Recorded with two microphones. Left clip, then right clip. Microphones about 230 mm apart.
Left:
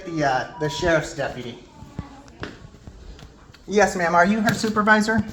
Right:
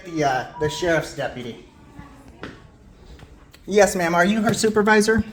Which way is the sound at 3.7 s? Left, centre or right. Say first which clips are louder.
Right 1 dB; right.